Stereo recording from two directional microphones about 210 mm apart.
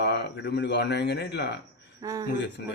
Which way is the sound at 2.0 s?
15° right (ahead or behind).